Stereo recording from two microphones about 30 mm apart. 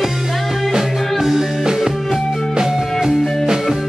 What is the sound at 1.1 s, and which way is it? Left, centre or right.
Music, centre.